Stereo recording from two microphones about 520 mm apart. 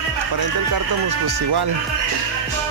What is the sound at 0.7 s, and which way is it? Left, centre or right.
Speech, right.